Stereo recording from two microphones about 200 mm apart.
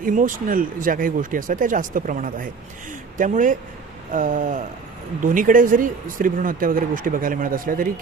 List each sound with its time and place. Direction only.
0.0 s speech: 40° right (ahead or behind)
3.2 s a sound: 40° right (ahead or behind)
5.2 s speech: 40° right (ahead or behind)